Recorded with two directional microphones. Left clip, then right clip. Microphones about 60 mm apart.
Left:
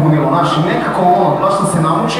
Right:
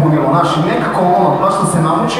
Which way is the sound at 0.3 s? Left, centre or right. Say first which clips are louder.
Right 1 dB; centre.